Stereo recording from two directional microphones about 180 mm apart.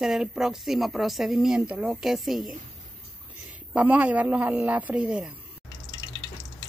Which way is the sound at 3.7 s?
10° right (ahead or behind).